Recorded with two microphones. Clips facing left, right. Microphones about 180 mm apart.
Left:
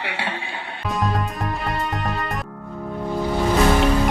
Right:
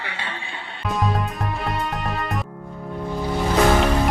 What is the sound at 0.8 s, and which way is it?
Music, centre (ahead or behind).